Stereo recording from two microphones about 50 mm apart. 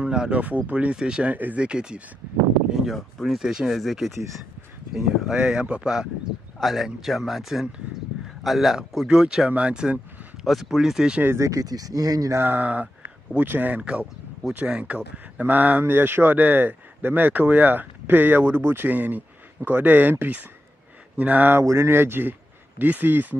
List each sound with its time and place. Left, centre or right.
0.0 s speech: centre
1.3 s speech: right
1.6 s speech: centre
2.7 s speech: centre
5.4 s speech: right
6.6 s speech: centre
9.5 s speech: right
10.4 s speech: centre
11.2 s speech: right
12.4 s speech: right
15.8 s speech: right
21.6 s speech: right
22.8 s speech: right